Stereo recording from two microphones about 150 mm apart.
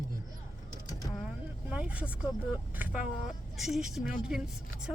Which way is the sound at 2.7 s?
10° right (ahead or behind).